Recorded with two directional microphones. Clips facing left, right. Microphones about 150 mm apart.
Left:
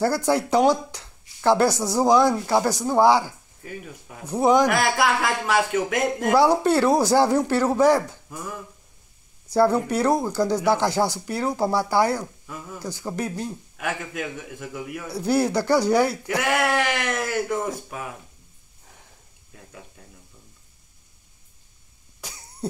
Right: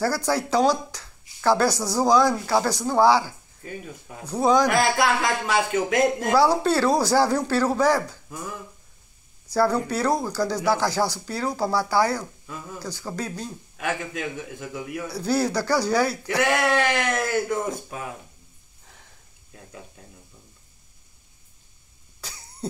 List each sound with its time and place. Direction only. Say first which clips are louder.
0.0 s speech: left 3 dB; 20° left (ahead or behind)
4.6 s speech: even; 5° left (ahead or behind)
6.3 s speech: left 3 dB; 20° left (ahead or behind)
9.5 s speech: left 3 dB; 20° left (ahead or behind)
13.7 s speech: right 2 dB; 5° left (ahead or behind)
15.0 s speech: left 2 dB; 20° left (ahead or behind); by 18.0 s 5° left (ahead or behind)
22.2 s cough: left 2 dB; 15° left (ahead or behind)